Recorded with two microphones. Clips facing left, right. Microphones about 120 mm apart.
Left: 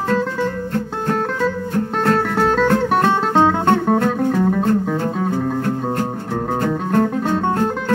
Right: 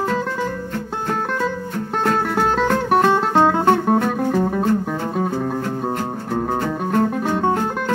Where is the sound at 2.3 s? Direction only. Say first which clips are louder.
Left 2 dB; 5° right (ahead or behind).